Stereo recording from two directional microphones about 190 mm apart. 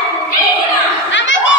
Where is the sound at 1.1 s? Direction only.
75° left (ahead or behind).